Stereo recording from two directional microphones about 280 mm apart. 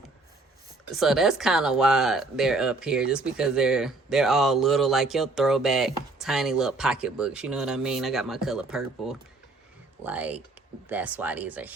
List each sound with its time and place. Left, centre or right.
0.9 s speech: centre